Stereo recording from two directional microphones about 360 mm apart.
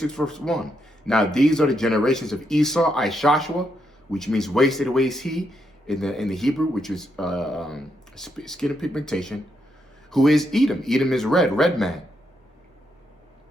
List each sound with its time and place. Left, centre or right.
0.0 s speech: centre